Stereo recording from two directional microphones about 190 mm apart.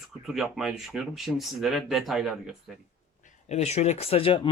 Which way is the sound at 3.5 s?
35° left (ahead or behind).